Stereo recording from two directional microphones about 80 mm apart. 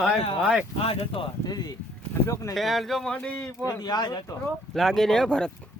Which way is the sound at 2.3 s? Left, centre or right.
Left.